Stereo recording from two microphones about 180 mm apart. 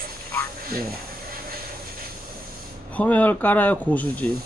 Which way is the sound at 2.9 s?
10° left (ahead or behind).